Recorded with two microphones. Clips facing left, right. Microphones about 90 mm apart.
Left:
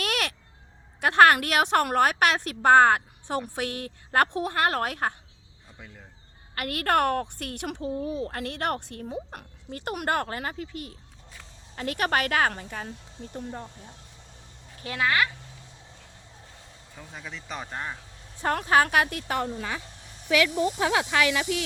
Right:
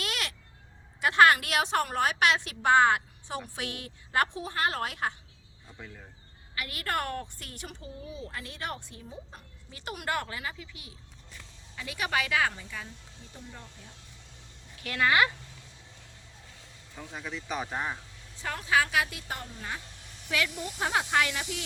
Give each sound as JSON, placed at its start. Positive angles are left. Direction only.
{"t": 0.0, "sound": "a sound", "side_deg": 55}
{"t": 1.0, "sound": "a woman's voice", "side_deg": 55}
{"t": 6.5, "sound": "a woman's voice", "side_deg": 55}
{"t": 9.8, "sound": "a woman's voice", "side_deg": 50}
{"t": 14.8, "sound": "speech", "side_deg": 25}
{"t": 17.0, "sound": "speech", "side_deg": 0}
{"t": 18.3, "sound": "a woman's voice", "side_deg": 55}